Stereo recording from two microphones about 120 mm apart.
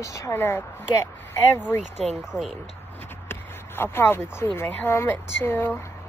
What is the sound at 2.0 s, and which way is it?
Speech, centre (ahead or behind).